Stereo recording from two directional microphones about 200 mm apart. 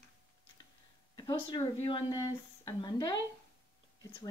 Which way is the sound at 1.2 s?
20° left (ahead or behind).